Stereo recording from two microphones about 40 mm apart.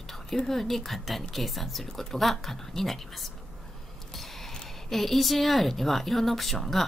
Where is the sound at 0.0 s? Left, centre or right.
Centre.